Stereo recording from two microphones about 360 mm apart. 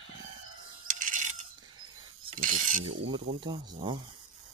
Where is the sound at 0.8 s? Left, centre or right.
Right.